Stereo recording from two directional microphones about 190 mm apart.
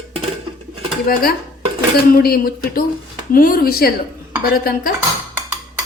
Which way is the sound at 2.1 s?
50° left (ahead or behind).